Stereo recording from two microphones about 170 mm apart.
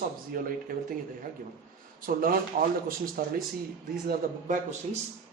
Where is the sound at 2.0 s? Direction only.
55° right (ahead or behind).